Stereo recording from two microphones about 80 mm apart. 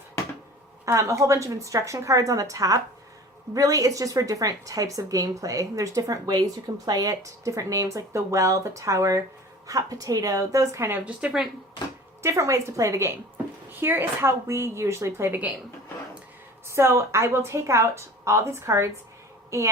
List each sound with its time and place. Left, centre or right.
0.9 s a woman's voice: right
10.9 s a woman's voice: centre
12.2 s a woman's voice: right
13.7 s a woman's voice: right
16.6 s a woman's voice: right